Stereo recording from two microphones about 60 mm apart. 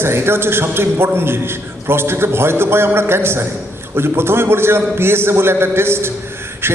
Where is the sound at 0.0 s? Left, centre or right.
Right.